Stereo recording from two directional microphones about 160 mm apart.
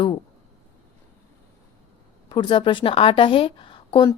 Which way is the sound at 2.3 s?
30° left (ahead or behind).